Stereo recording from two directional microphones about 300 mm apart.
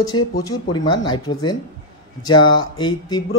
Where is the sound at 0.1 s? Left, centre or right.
Left.